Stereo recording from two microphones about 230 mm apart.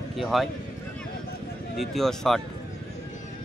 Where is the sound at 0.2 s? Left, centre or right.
Centre.